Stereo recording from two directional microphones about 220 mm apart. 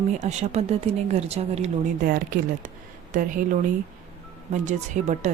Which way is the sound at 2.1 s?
40° right (ahead or behind).